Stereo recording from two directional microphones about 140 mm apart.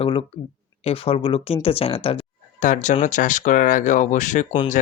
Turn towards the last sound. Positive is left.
turn(degrees=70)  # may be behind; listen again after turning